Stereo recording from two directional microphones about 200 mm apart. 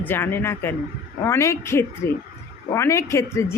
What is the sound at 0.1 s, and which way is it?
A woman's voice, 10° left (ahead or behind).